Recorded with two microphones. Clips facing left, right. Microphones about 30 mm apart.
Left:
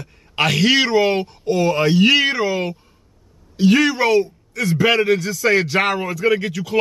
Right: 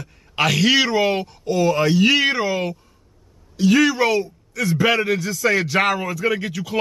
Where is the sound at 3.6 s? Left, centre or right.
Centre.